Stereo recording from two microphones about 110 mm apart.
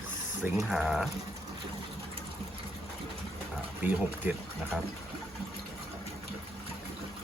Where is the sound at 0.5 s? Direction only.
Centre (ahead or behind).